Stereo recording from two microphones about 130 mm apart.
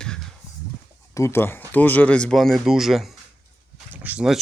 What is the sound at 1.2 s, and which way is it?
Speech, 20° left (ahead or behind).